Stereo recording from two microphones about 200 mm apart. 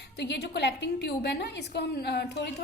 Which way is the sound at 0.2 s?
55° left (ahead or behind).